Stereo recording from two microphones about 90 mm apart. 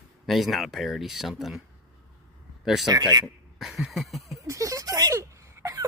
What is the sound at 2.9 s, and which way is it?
Speech, 45° right (ahead or behind).